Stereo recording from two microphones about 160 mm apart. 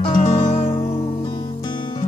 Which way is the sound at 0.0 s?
35° left (ahead or behind).